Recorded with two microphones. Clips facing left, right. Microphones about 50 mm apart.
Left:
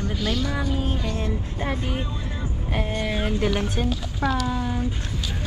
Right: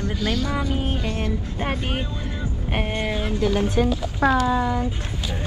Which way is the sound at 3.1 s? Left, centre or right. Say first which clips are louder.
Even; left.